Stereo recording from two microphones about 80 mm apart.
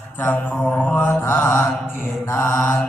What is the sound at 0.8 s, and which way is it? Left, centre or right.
Mantra, centre.